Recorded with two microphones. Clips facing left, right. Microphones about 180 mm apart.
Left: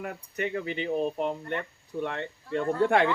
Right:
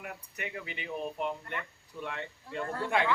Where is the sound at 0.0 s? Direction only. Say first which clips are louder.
Left 9 dB; 45° left (ahead or behind).